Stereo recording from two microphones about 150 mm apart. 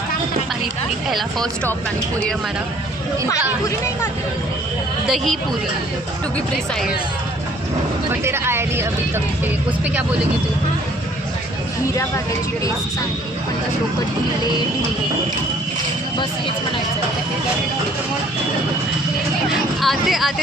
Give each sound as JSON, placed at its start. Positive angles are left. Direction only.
{"t": 5.0, "sound": "speech", "side_deg": 0}
{"t": 8.2, "sound": "speech", "side_deg": -15}
{"t": 19.8, "sound": "speech", "side_deg": 0}